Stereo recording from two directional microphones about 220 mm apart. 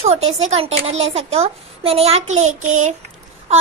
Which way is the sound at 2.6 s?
65° right (ahead or behind).